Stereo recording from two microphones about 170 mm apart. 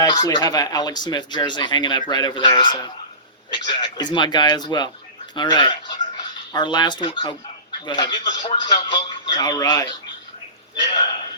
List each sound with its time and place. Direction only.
0.0 s speech: 25° left (ahead or behind)